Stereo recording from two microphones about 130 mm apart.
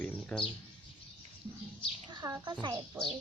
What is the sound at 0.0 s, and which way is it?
Bird, 5° left (ahead or behind).